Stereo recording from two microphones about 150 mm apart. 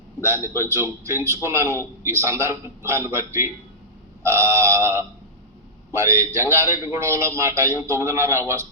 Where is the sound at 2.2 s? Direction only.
20° right (ahead or behind).